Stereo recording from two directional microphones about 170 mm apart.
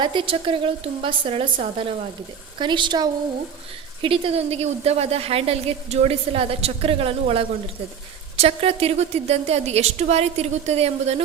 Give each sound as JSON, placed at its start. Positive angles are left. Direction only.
{"t": 0.0, "sound": "a woman's voice", "side_deg": -25}